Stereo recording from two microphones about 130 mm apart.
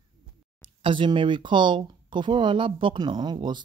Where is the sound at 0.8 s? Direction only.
40° right (ahead or behind).